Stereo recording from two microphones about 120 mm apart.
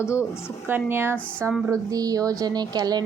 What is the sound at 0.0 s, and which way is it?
Speech, 20° left (ahead or behind).